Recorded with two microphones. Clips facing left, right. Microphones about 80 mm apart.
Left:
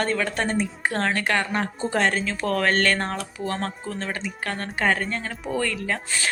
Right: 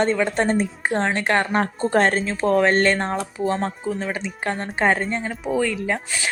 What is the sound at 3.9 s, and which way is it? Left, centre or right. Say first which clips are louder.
Speech: right 4 dB; centre.